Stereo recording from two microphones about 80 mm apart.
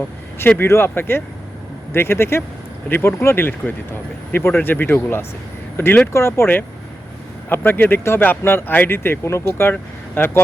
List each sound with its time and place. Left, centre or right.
0.3 s speech: left